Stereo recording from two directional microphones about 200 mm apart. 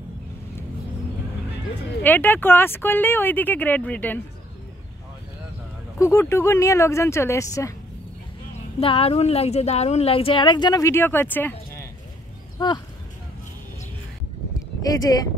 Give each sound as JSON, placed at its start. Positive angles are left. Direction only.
{"t": 2.0, "sound": "speech", "side_deg": 10}
{"t": 5.9, "sound": "speech", "side_deg": 15}
{"t": 8.7, "sound": "a woman's voice", "side_deg": 30}
{"t": 12.5, "sound": "speech", "side_deg": 20}